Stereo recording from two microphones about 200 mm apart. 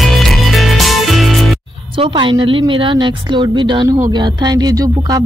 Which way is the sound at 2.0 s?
25° right (ahead or behind).